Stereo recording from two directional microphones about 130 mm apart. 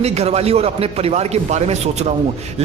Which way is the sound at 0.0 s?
55° right (ahead or behind).